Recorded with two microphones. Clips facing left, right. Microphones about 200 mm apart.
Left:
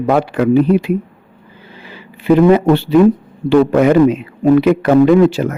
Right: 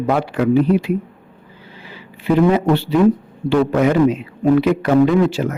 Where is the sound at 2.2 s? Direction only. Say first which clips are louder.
Left 5 dB; 60° left (ahead or behind).